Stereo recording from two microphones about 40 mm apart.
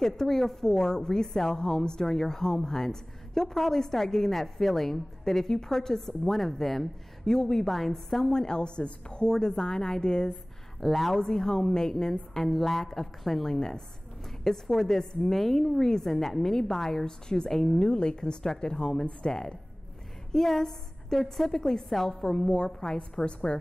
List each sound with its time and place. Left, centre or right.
0.0 s a woman's voice: centre
8.3 s a woman's voice: centre
10.8 s speech: centre
11.1 s a woman's voice: centre
13.6 s a woman's voice: centre
20.3 s a woman's voice: centre
23.2 s a woman's voice: left